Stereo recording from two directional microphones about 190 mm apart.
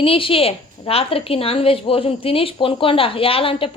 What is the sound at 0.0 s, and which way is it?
A woman's voice, 30° left (ahead or behind).